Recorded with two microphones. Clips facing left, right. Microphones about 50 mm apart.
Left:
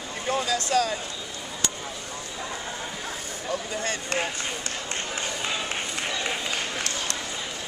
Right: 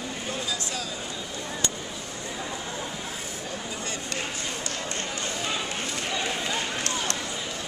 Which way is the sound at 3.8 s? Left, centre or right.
Left.